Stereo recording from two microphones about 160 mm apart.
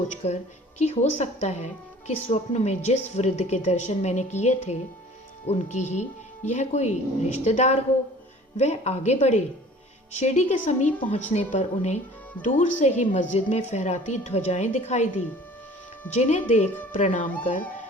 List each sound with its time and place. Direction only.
0.2 s a woman's voice: 40° left (ahead or behind)
16.1 s a woman's voice: 45° left (ahead or behind)